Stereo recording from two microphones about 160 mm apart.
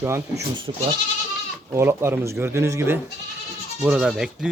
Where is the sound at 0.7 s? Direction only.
35° right (ahead or behind).